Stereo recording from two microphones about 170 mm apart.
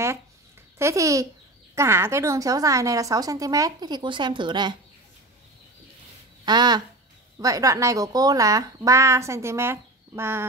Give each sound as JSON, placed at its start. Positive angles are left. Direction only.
{"t": 0.7, "sound": "a woman's voice", "side_deg": -15}
{"t": 6.4, "sound": "a woman's voice", "side_deg": -25}